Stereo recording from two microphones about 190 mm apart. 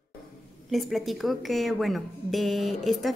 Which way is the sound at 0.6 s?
Centre (ahead or behind).